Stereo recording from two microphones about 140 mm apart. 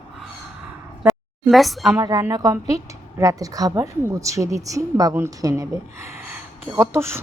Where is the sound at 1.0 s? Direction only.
Centre (ahead or behind).